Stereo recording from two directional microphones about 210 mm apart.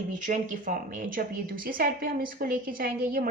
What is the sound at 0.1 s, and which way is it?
A woman's voice, 35° right (ahead or behind).